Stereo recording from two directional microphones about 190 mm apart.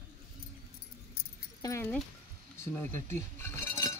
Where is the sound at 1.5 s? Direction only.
15° left (ahead or behind).